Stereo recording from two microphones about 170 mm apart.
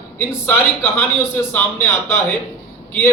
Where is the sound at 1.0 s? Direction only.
10° left (ahead or behind).